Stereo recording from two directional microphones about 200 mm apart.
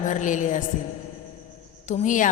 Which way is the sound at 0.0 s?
40° left (ahead or behind).